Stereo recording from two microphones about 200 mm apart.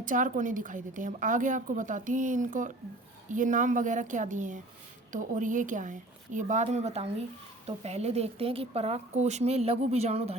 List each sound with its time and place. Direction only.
0.0 s a woman's voice: 40° right (ahead or behind)